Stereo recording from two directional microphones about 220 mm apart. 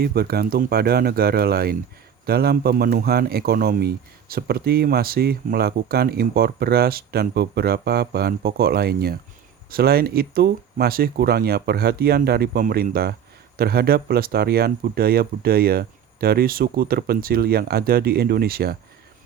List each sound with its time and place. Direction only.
0.0 s speech: 45° right (ahead or behind)